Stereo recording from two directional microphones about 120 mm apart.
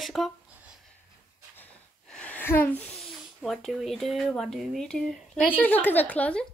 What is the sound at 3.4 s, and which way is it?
Speech, centre (ahead or behind).